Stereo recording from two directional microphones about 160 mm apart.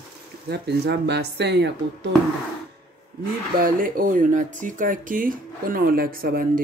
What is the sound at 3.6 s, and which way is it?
Speech, 60° right (ahead or behind).